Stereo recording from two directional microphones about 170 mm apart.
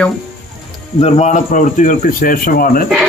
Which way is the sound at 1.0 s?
40° left (ahead or behind).